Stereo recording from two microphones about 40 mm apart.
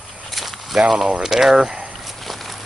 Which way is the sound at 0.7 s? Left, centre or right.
Centre.